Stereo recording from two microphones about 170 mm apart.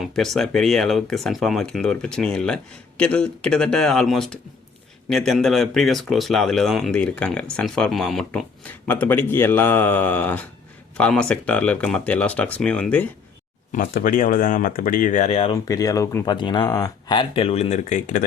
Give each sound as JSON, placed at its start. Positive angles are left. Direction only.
{"t": 0.0, "sound": "speech", "side_deg": 0}
{"t": 13.7, "sound": "speech", "side_deg": 55}
{"t": 15.3, "sound": "speech", "side_deg": 35}
{"t": 15.5, "sound": "speech", "side_deg": 20}